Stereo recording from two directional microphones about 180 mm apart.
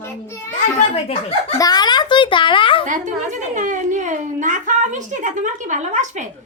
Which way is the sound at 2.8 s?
45° right (ahead or behind).